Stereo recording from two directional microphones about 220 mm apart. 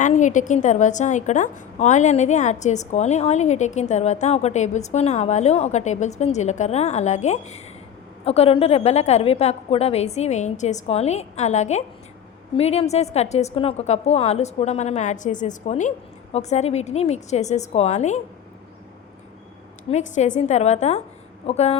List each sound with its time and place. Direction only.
0.0 s a woman's voice: 35° left (ahead or behind)
19.9 s a woman's voice: 35° left (ahead or behind)